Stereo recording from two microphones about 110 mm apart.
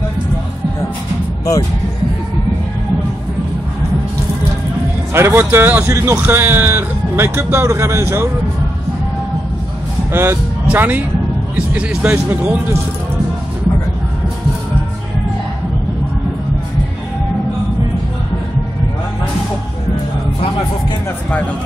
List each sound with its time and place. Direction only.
5.1 s speech: 20° right (ahead or behind)
10.1 s speech: 20° right (ahead or behind)